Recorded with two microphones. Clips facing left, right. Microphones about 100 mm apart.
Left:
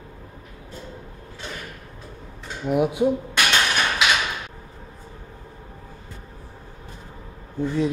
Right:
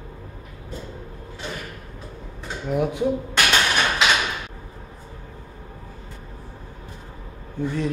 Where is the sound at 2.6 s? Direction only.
15° left (ahead or behind).